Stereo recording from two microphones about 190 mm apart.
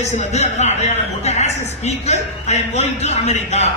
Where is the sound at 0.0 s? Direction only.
35° left (ahead or behind).